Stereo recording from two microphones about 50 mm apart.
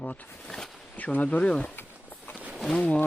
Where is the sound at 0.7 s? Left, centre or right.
Centre.